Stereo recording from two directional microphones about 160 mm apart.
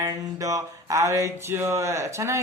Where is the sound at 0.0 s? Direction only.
20° right (ahead or behind).